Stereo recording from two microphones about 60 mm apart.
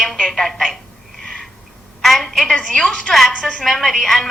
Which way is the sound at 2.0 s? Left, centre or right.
Centre.